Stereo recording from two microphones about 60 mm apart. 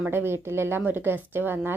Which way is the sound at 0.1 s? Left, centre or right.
Right.